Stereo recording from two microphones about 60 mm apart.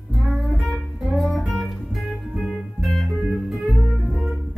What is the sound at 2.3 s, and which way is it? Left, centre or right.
Music, centre.